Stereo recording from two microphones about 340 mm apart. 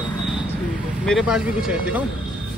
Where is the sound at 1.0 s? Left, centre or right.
Centre.